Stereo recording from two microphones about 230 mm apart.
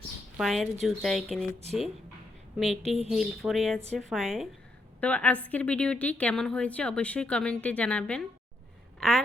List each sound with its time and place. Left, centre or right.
0.3 s a woman's voice: centre
2.8 s speech: right
3.1 s a woman's voice: centre